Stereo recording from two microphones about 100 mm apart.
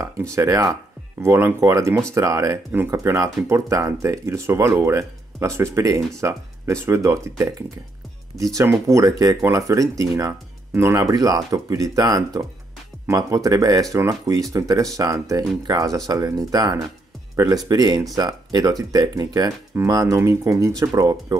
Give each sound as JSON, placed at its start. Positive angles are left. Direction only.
{"t": 0.0, "sound": "speech", "side_deg": -30}
{"t": 8.5, "sound": "speech", "side_deg": -30}